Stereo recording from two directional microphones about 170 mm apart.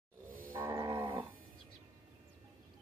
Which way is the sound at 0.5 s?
15° right (ahead or behind).